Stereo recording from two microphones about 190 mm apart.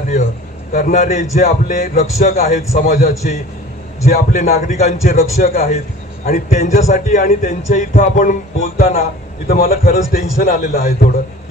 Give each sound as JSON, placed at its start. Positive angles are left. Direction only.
{"t": 0.7, "sound": "a man's voice", "side_deg": 45}